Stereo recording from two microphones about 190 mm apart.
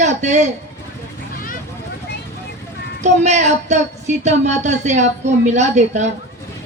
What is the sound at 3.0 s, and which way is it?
A man's voice, 35° right (ahead or behind).